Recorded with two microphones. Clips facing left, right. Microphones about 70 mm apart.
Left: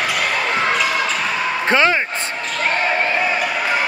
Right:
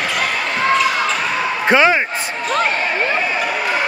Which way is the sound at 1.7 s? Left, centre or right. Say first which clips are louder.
Right 3 dB; centre.